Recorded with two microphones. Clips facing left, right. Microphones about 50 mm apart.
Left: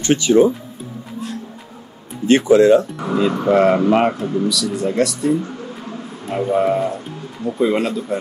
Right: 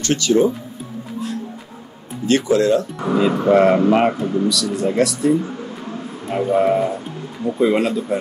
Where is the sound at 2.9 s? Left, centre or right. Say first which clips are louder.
Right 1 dB; centre.